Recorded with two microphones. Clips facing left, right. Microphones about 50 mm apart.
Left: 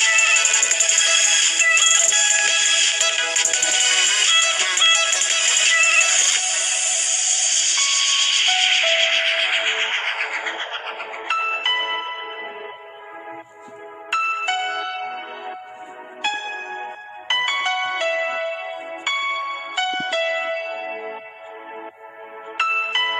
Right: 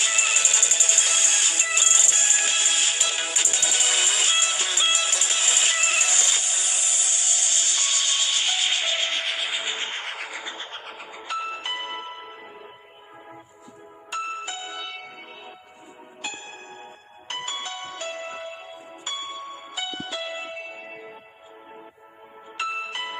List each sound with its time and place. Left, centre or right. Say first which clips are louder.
0.0 s music: left 7 dB; left
14.1 s music: left 9 dB; left
22.5 s music: left 8 dB; left